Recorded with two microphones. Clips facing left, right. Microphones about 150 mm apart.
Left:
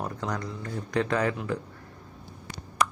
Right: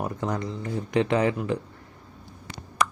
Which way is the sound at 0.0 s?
20° right (ahead or behind).